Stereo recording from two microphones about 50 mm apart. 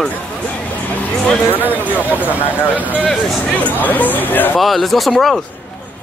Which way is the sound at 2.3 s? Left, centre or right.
Left.